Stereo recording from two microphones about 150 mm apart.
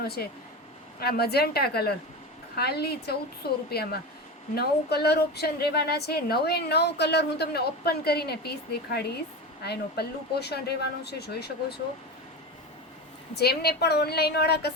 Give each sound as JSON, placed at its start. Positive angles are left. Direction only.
{"t": 0.0, "sound": "a woman's voice", "side_deg": 90}
{"t": 13.3, "sound": "a woman's voice", "side_deg": 90}